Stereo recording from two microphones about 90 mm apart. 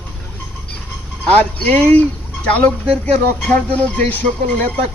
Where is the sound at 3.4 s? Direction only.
15° left (ahead or behind).